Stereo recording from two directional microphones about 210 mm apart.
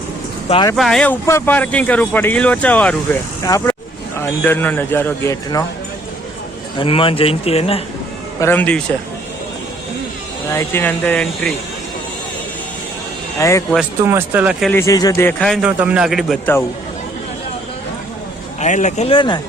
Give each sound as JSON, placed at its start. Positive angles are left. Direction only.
{"t": 0.5, "sound": "speech", "side_deg": 20}
{"t": 0.8, "sound": "a man's voice", "side_deg": 0}
{"t": 6.7, "sound": "speech", "side_deg": 25}
{"t": 8.4, "sound": "speech", "side_deg": 10}
{"t": 10.5, "sound": "speech", "side_deg": 15}
{"t": 13.4, "sound": "speech", "side_deg": 15}
{"t": 14.1, "sound": "speech", "side_deg": -10}
{"t": 14.7, "sound": "a man's voice", "side_deg": 15}
{"t": 18.6, "sound": "speech", "side_deg": 35}